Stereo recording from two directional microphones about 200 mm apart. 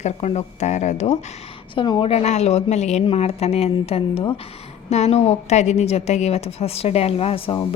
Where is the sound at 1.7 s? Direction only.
25° left (ahead or behind).